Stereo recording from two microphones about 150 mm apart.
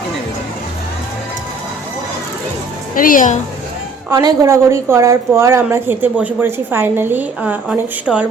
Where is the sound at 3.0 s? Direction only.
65° left (ahead or behind).